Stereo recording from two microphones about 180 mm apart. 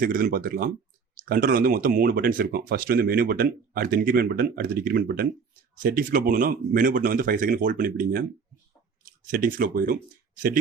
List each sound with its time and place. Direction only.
0.0 s speech: 50° right (ahead or behind)